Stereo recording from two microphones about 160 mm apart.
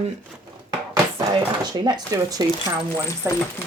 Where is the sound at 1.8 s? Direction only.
25° right (ahead or behind).